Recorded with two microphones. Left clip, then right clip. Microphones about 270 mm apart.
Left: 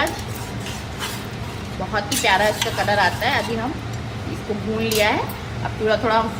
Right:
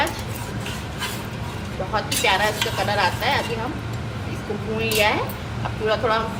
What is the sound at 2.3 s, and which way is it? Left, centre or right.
A woman's voice, left.